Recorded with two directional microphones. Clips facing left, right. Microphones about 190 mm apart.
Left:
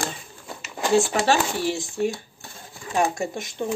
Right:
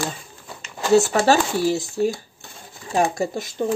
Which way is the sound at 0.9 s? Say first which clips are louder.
Right 4 dB; 40° right (ahead or behind).